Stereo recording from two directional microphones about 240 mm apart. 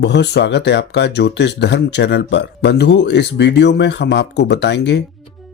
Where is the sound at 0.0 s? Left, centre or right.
Left.